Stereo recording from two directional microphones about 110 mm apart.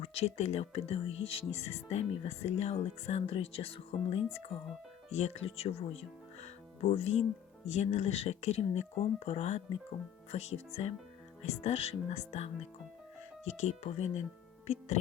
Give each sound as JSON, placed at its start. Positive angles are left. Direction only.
{"t": 0.0, "sound": "speech", "side_deg": 70}
{"t": 5.1, "sound": "speech", "side_deg": 80}
{"t": 5.5, "sound": "speech", "side_deg": 65}
{"t": 7.7, "sound": "speech", "side_deg": 90}
{"t": 11.4, "sound": "speech", "side_deg": 85}